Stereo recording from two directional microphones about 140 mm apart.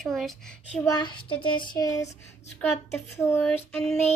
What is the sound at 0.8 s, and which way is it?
Child singing, 30° left (ahead or behind).